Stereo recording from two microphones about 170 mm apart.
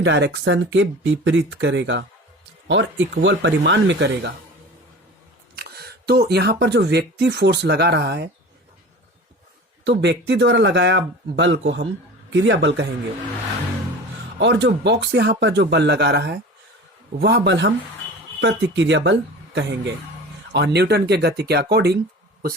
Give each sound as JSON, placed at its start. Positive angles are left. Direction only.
{"t": 0.0, "sound": "speech", "side_deg": -90}
{"t": 5.5, "sound": "speech", "side_deg": -70}
{"t": 9.8, "sound": "speech", "side_deg": -90}
{"t": 14.3, "sound": "speech", "side_deg": -90}